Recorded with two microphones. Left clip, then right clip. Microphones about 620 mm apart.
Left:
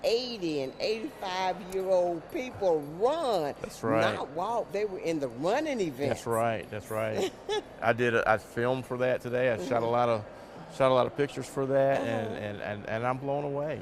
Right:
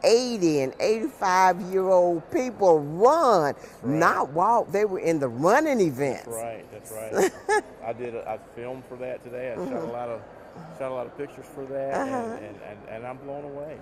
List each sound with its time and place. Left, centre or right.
0.0 s speech: right
6.3 s speech: left